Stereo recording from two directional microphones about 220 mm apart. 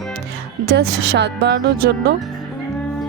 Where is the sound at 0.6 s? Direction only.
50° right (ahead or behind).